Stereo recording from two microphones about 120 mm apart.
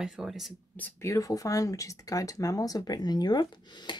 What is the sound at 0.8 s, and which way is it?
Speech, 25° left (ahead or behind).